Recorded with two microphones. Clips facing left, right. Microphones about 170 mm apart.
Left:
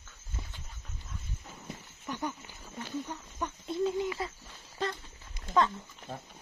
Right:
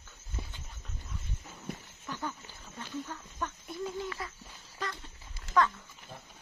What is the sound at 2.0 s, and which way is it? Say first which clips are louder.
Speech: left 3 dB; 15° left (ahead or behind).